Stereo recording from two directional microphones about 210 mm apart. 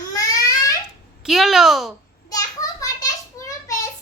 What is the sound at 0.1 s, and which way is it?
Crying, 15° left (ahead or behind).